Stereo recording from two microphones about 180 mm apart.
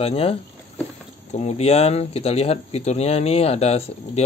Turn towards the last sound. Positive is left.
turn(degrees=35)  # may be behind; listen again after turning